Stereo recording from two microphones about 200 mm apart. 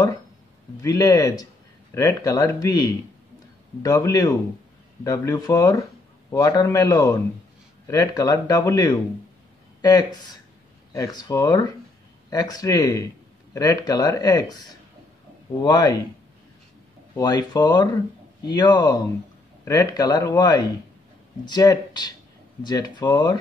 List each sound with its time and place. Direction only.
0.8 s speech: 15° left (ahead or behind)
17.1 s speech: 20° left (ahead or behind)